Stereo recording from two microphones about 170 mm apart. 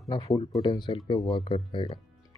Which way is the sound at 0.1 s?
20° left (ahead or behind).